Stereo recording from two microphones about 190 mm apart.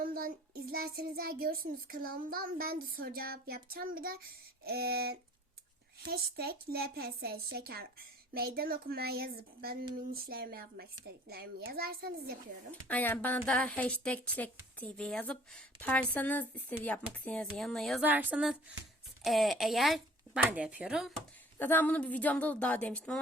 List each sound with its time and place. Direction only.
0.0 s a woman's voice: 50° right (ahead or behind)
12.9 s a woman's voice: 10° left (ahead or behind)
18.0 s speech: 10° right (ahead or behind)
21.6 s a woman's voice: 10° left (ahead or behind)